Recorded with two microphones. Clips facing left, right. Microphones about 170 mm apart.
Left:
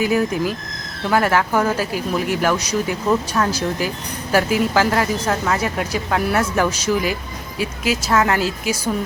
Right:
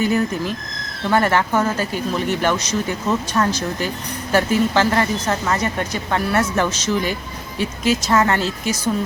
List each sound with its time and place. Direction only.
0.0 s speech: 5° left (ahead or behind)